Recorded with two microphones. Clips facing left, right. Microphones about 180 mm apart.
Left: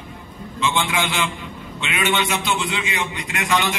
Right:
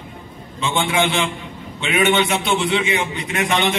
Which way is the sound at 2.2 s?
30° right (ahead or behind).